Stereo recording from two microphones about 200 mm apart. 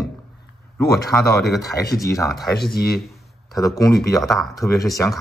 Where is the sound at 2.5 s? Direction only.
50° left (ahead or behind).